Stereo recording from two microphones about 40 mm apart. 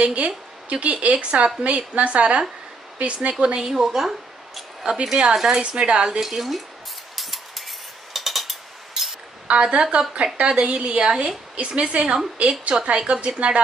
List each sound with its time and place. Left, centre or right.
0.0 s a woman's voice: right
3.6 s speech: centre
4.8 s speech: centre
5.6 s a woman's voice: right
6.0 s speech: centre
7.2 s mechanisms: centre
9.5 s a woman's voice: right